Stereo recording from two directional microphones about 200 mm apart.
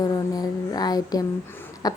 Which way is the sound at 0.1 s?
20° left (ahead or behind).